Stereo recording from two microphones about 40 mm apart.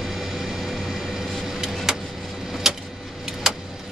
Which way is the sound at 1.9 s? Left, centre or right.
Centre.